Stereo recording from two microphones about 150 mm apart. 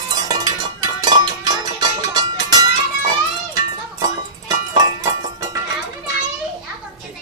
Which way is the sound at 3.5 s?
25° right (ahead or behind).